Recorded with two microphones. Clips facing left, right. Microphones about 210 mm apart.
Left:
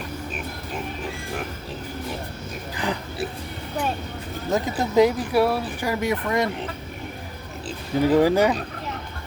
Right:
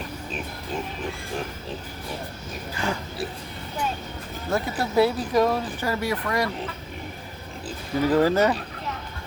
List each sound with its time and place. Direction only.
2.7 s speech: 15° left (ahead or behind)
4.5 s speech: 20° left (ahead or behind)
8.0 s speech: 15° left (ahead or behind)